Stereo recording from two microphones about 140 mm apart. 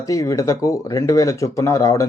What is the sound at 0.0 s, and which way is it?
Speech, 25° left (ahead or behind).